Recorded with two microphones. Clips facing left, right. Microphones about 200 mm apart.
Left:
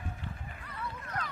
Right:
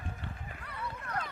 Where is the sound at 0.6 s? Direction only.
65° right (ahead or behind).